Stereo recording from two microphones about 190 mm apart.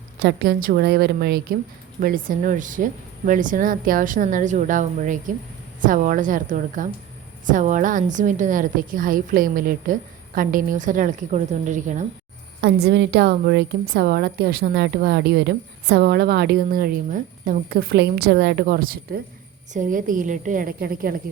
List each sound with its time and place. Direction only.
0.2 s a woman's voice: 55° right (ahead or behind)
12.6 s a woman's voice: 65° right (ahead or behind)